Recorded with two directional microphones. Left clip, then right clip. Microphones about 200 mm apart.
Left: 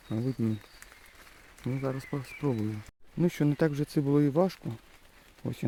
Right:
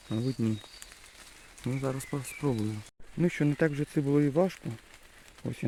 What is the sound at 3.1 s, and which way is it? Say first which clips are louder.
Speech: even; 5° left (ahead or behind).